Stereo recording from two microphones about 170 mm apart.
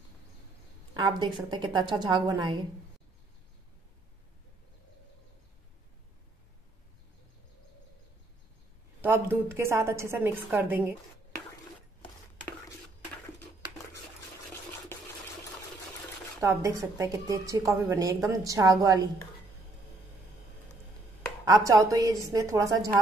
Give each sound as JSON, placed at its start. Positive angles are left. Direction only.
{"t": 0.9, "sound": "a woman's voice", "side_deg": -25}
{"t": 9.0, "sound": "a woman's voice", "side_deg": -10}
{"t": 16.3, "sound": "a woman's voice", "side_deg": -15}
{"t": 21.5, "sound": "a woman's voice", "side_deg": -20}